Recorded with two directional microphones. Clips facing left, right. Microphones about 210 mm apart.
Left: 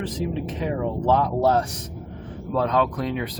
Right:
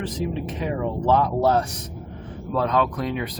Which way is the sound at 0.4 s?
35° left (ahead or behind).